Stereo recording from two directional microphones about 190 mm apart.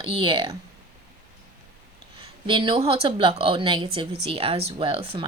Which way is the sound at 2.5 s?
25° right (ahead or behind).